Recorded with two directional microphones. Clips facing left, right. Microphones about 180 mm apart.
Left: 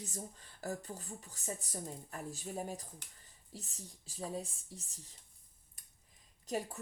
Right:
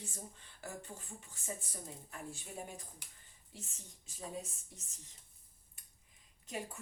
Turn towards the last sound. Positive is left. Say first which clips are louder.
# left 5 dB
turn(degrees=40)  # may be behind; listen again after turning